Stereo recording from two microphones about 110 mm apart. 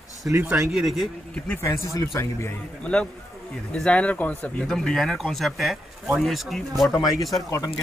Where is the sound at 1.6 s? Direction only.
25° left (ahead or behind).